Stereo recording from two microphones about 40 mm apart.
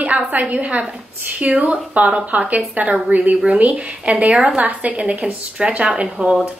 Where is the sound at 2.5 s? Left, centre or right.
Right.